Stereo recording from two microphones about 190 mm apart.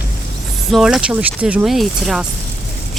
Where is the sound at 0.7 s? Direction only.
5° right (ahead or behind).